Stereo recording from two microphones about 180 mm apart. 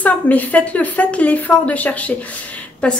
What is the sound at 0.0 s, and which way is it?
A woman's voice, 10° left (ahead or behind).